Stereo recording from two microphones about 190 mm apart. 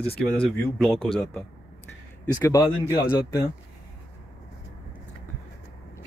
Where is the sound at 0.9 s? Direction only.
30° left (ahead or behind).